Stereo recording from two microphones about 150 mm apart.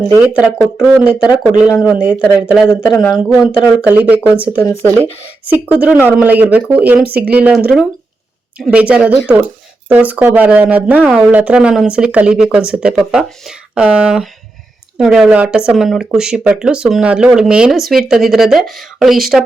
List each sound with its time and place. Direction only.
0.2 s a woman's voice: 10° right (ahead or behind)
4.5 s speech: 20° left (ahead or behind)
5.8 s a woman's voice: 10° right (ahead or behind)
7.0 s speech: 90° right
7.3 s a woman's voice: 10° right (ahead or behind)